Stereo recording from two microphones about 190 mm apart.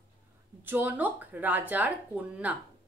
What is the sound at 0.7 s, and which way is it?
A woman's voice, 10° right (ahead or behind).